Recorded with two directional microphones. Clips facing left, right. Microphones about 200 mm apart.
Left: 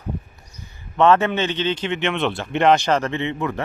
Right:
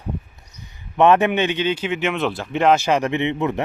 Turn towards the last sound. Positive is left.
turn(degrees=-20)  # may be behind; listen again after turning